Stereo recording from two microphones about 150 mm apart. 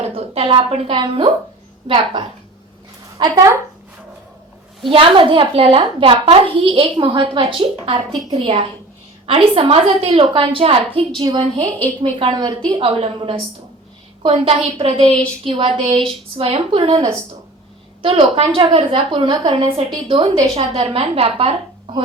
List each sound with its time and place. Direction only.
0.0 s a woman's voice: 40° right (ahead or behind)
4.9 s a woman's voice: 35° right (ahead or behind)